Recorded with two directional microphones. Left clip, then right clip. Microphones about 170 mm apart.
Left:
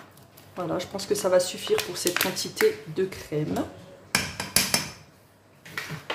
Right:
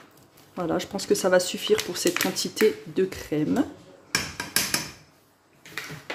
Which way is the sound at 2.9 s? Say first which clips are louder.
Right 2 dB; 35° right (ahead or behind).